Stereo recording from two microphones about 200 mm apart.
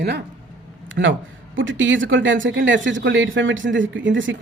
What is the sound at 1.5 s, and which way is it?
A woman's voice, 70° right (ahead or behind).